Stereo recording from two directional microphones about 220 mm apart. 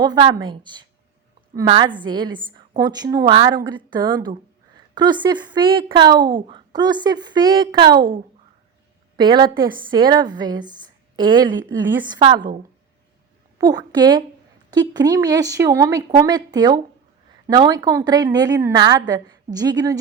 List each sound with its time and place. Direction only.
0.0 s speech: 20° right (ahead or behind)
7.9 s a woman's voice: 40° right (ahead or behind)
9.1 s a woman's voice: 20° right (ahead or behind)
13.6 s speech: 15° right (ahead or behind)